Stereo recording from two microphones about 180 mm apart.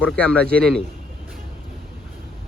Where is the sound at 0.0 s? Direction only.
5° left (ahead or behind).